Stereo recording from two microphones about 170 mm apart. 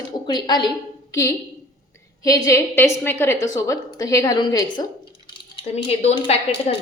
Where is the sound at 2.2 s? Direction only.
20° left (ahead or behind); by 6.3 s 40° left (ahead or behind).